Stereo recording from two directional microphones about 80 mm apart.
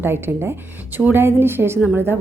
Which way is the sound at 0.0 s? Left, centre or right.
Right.